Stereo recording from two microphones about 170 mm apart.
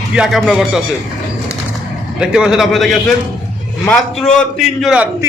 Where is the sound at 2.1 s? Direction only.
5° right (ahead or behind).